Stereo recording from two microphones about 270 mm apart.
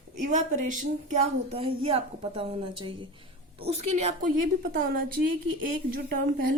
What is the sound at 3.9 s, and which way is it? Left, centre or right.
A woman's voice, right.